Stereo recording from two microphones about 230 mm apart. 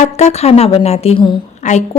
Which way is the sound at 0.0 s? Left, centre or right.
Left.